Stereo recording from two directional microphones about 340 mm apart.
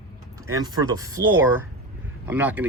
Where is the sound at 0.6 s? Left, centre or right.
Centre.